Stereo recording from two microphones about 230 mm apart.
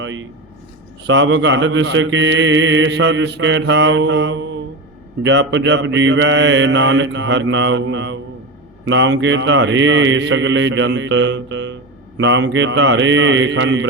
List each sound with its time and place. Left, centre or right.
0.0 s speech: right
1.0 s mantra: right